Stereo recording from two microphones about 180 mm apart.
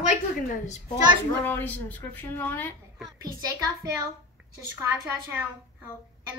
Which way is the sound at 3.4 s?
20° right (ahead or behind).